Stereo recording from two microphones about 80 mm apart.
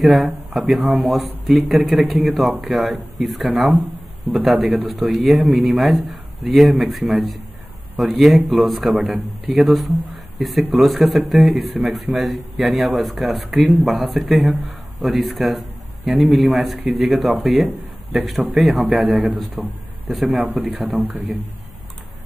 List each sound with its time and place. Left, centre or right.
0.0 s a man's voice: centre
20.9 s a man's voice: right